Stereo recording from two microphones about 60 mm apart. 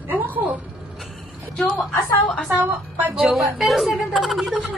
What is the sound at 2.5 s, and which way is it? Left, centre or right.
Speech, right.